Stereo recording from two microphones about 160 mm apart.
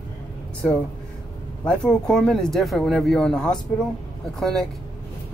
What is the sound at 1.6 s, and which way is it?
Speech, 5° left (ahead or behind).